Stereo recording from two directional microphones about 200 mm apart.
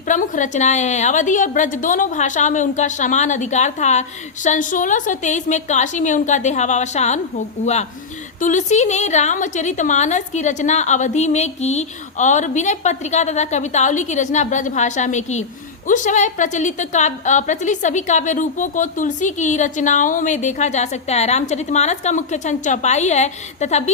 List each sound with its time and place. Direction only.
0.1 s a woman's voice: 40° left (ahead or behind)